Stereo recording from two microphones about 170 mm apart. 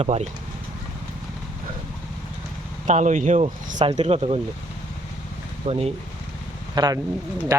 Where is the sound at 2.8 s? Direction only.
45° right (ahead or behind).